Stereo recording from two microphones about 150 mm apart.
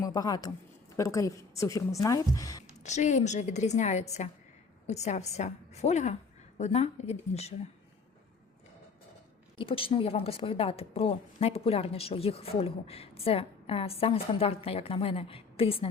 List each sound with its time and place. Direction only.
0.0 s a woman's voice: 25° left (ahead or behind)
2.8 s a woman's voice: 50° left (ahead or behind)
9.6 s a woman's voice: 35° left (ahead or behind)